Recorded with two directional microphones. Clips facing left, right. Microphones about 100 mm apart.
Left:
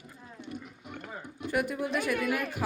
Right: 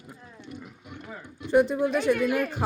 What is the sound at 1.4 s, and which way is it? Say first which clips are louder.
Speech: right 9 dB; 25° right (ahead or behind).